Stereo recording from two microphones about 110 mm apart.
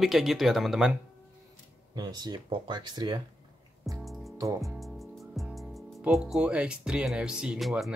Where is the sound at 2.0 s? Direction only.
40° right (ahead or behind).